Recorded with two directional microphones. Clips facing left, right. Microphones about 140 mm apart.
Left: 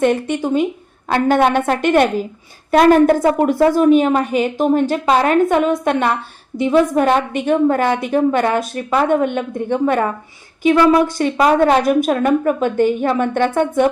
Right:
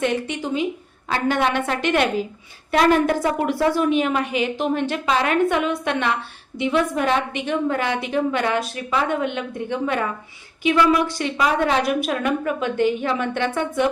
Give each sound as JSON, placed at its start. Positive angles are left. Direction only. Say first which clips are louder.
{"t": 0.0, "sound": "a woman's voice", "louder": "left 7 dB", "side_deg": 50}